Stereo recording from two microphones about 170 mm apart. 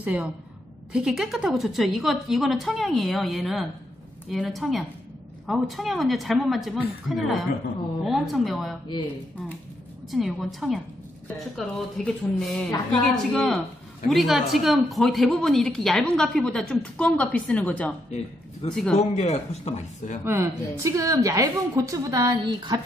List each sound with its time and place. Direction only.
0.0 s a woman's voice: 10° right (ahead or behind)
8.8 s speech: 25° left (ahead or behind)
10.1 s a woman's voice: centre (ahead or behind)
19.1 s speech: 40° left (ahead or behind)
20.2 s a woman's voice: 15° right (ahead or behind)